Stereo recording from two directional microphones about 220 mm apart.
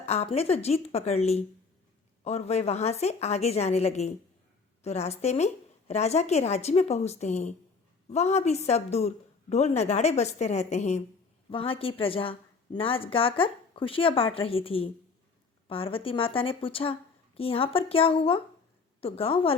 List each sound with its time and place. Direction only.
0.0 s a woman's voice: 30° left (ahead or behind)